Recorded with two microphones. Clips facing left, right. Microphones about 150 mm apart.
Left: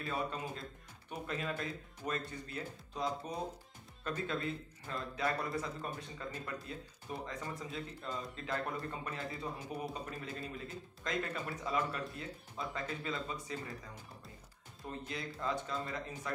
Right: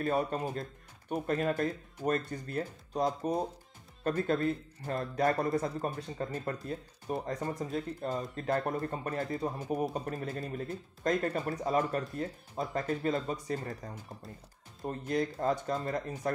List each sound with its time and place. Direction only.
0.0 s speech: 50° right (ahead or behind)